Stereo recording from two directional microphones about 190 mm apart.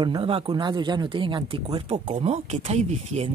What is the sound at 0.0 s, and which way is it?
Speech, 25° right (ahead or behind).